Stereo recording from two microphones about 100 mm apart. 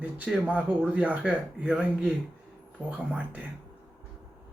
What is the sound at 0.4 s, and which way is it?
Speech, 15° right (ahead or behind).